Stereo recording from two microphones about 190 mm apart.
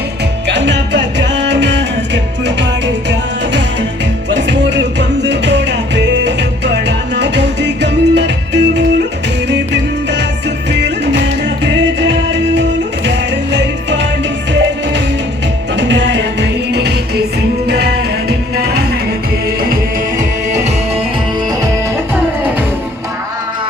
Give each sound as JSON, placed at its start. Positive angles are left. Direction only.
{"t": 0.4, "sound": "music", "side_deg": -65}
{"t": 10.7, "sound": "music", "side_deg": -65}
{"t": 15.7, "sound": "music", "side_deg": -70}
{"t": 18.3, "sound": "music", "side_deg": -55}
{"t": 20.5, "sound": "music", "side_deg": -35}